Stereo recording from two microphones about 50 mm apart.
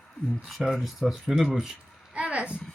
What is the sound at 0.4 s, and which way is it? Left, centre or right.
Speech, centre.